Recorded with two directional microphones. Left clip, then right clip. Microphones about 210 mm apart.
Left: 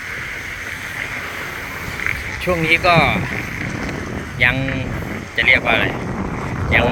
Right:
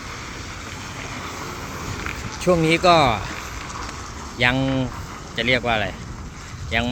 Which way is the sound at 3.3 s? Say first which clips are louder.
Left 7 dB; 60° right (ahead or behind).